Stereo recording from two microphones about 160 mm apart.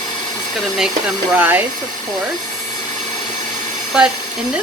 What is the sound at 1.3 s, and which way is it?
Speech, 10° right (ahead or behind).